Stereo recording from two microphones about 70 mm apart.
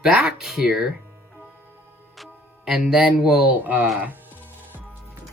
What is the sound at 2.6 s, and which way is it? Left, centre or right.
Speech, centre.